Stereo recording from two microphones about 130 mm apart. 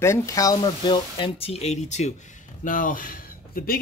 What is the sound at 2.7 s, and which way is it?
Speech, 90° left.